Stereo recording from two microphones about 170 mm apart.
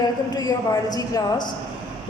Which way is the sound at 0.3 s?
25° left (ahead or behind).